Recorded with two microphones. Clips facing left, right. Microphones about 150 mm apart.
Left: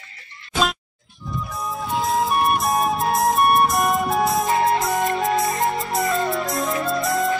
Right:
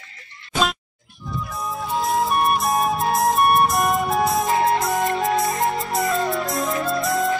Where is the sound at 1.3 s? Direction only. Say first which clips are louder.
Even; centre (ahead or behind).